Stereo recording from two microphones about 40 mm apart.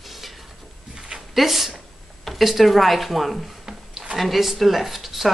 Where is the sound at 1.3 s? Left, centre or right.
Centre.